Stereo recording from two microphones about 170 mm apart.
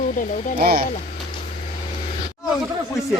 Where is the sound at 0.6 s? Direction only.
65° right (ahead or behind).